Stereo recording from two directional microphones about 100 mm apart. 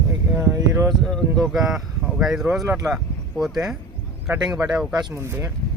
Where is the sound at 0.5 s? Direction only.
30° right (ahead or behind).